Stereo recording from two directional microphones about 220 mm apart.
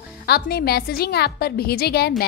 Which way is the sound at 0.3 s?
45° left (ahead or behind).